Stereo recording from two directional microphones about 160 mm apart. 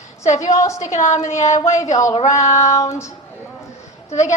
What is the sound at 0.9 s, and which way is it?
A woman's voice, 50° left (ahead or behind).